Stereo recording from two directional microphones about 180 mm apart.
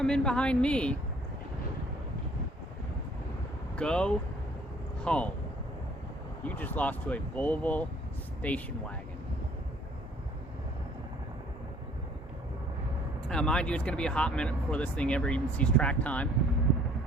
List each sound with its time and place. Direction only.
0.0 s a woman's voice: 5° left (ahead or behind)
3.8 s a woman's voice: 5° left (ahead or behind)
6.4 s speech: 10° left (ahead or behind)
13.2 s speech: 5° left (ahead or behind)